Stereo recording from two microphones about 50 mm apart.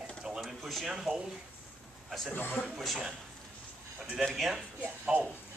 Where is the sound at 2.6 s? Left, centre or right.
Centre.